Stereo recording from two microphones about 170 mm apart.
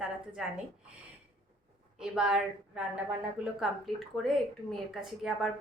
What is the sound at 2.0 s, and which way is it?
Speech, 5° right (ahead or behind).